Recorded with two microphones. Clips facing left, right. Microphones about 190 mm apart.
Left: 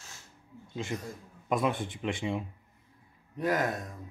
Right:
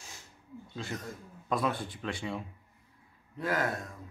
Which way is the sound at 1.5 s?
20° left (ahead or behind).